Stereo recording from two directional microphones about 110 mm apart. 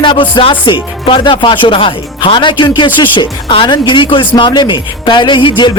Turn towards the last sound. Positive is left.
turn(degrees=45)  # may be behind; listen again after turning